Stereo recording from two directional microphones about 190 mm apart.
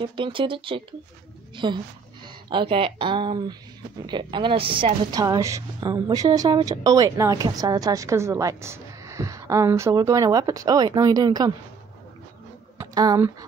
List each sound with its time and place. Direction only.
0.0 s a woman's voice: 25° right (ahead or behind)
12.7 s speech: 20° right (ahead or behind)